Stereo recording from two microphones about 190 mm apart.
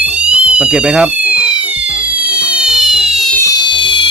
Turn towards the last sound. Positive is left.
turn(degrees=25)  # may be behind; listen again after turning